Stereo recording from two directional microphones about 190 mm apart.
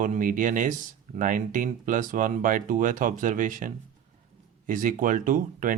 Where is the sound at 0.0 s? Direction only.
45° right (ahead or behind).